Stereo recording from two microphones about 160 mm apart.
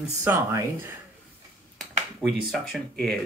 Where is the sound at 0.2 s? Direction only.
15° right (ahead or behind).